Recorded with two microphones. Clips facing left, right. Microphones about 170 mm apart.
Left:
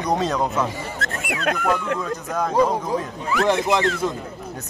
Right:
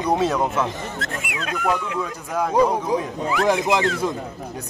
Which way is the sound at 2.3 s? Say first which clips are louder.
Right 1 dB; 10° right (ahead or behind).